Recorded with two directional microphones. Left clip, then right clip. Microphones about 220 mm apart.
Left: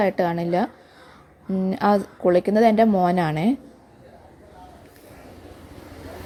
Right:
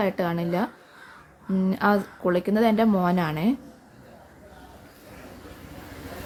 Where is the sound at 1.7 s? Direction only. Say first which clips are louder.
Left 3 dB; 15° left (ahead or behind).